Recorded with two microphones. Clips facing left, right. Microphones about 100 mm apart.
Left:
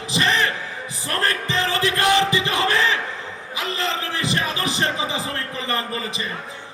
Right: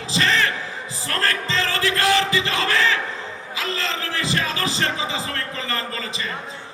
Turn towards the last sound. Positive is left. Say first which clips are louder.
# left 2 dB
turn(degrees=20)  # may be behind; listen again after turning